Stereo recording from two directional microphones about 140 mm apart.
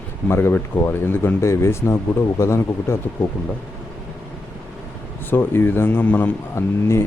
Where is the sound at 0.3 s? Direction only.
15° left (ahead or behind).